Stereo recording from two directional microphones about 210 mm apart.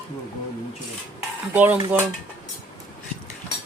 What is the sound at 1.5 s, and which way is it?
Speech, 10° right (ahead or behind).